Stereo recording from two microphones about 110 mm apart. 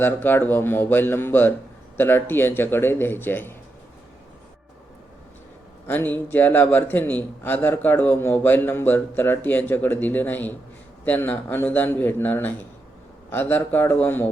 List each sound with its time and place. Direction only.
0.0 s speech: 20° left (ahead or behind)
5.9 s a man's voice: 20° left (ahead or behind)